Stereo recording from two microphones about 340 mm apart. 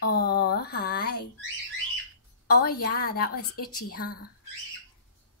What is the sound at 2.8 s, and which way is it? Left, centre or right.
A woman's voice, left.